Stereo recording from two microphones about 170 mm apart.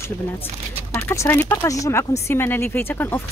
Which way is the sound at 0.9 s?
15° left (ahead or behind).